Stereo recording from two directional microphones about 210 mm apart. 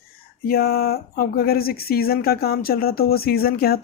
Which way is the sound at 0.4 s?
45° left (ahead or behind).